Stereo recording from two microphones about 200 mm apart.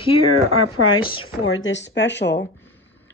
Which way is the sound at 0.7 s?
90° left.